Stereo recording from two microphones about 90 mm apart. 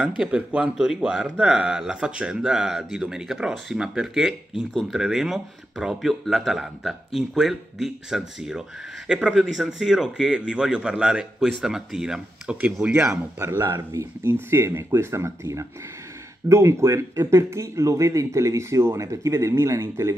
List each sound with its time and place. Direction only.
0.0 s speech: 15° right (ahead or behind)
13.1 s speech: 30° right (ahead or behind)